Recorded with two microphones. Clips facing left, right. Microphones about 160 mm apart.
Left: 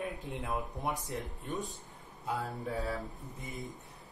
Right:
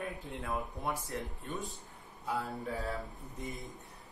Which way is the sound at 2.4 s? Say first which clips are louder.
Left 1 dB; centre (ahead or behind).